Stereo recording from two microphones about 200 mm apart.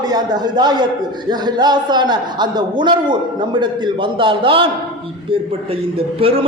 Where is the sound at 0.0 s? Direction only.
20° right (ahead or behind).